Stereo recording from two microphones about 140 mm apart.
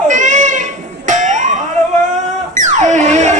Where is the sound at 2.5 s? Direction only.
60° right (ahead or behind).